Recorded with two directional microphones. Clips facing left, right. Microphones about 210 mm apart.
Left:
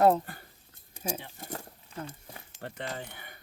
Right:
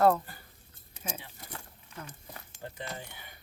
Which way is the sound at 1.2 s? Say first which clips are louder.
Left 6 dB; 50° left (ahead or behind).